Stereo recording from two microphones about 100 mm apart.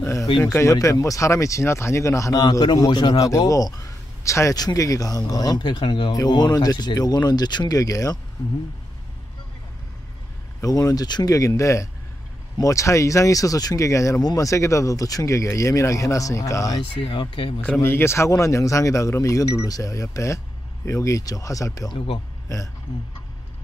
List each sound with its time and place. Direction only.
0.0 s speech: 30° left (ahead or behind)
10.6 s speech: 35° left (ahead or behind)
17.0 s speech: 60° left (ahead or behind)
17.8 s speech: 25° left (ahead or behind)
21.9 s a man's voice: 65° left (ahead or behind)